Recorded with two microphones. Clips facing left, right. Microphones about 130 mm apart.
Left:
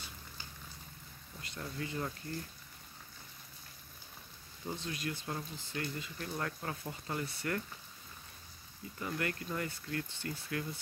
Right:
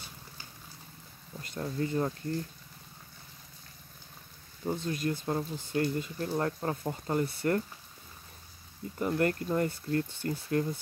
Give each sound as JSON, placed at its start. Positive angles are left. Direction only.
{"t": 1.4, "sound": "speech", "side_deg": -40}
{"t": 4.6, "sound": "speech", "side_deg": -45}
{"t": 9.0, "sound": "speech", "side_deg": -45}